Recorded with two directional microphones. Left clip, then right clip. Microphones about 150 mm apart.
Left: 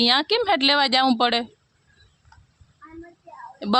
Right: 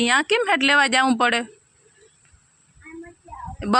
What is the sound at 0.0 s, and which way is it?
A woman's voice, 15° left (ahead or behind).